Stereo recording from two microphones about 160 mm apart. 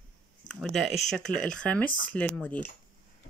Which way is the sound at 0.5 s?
Centre (ahead or behind).